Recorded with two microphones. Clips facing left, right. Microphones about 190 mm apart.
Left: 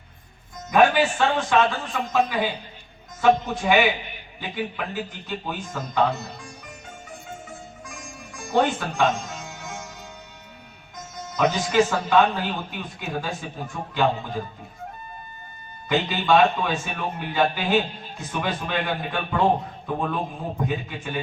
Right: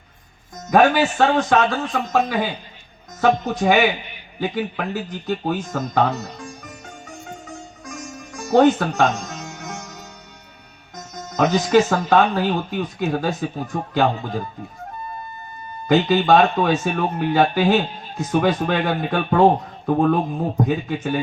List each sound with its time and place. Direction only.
0.7 s a man's voice: 40° right (ahead or behind)
5.0 s a man's voice: 40° right (ahead or behind)
7.9 s music: 40° right (ahead or behind)
10.9 s speech: 40° right (ahead or behind)
15.9 s a man's voice: 40° right (ahead or behind)